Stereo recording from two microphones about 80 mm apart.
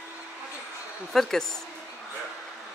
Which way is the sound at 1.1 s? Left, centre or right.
Centre.